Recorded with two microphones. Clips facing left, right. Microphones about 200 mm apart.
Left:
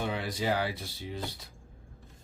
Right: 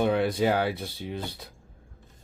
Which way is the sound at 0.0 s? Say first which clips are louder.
Right 9 dB; 60° right (ahead or behind).